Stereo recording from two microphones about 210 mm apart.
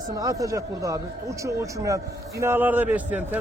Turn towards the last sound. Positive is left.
turn(degrees=-10)  # may be behind; listen again after turning